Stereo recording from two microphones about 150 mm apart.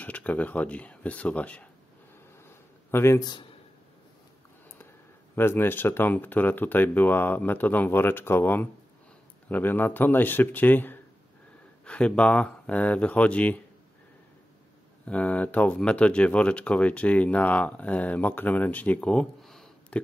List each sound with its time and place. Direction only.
0.0 s speech: 10° left (ahead or behind)
2.9 s a man's voice: 15° left (ahead or behind)
5.3 s speech: 15° left (ahead or behind)
15.0 s speech: 10° left (ahead or behind)